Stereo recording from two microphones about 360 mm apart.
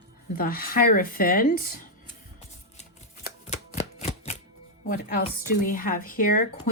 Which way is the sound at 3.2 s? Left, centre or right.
Centre.